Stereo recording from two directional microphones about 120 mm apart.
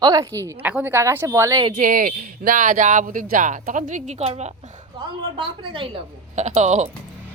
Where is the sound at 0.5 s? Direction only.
15° right (ahead or behind).